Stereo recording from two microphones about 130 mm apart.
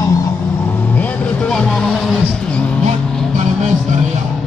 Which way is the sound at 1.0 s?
5° left (ahead or behind).